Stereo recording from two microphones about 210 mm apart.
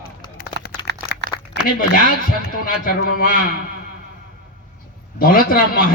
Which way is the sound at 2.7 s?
45° left (ahead or behind).